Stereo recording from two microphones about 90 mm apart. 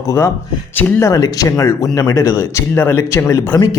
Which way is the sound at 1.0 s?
45° left (ahead or behind).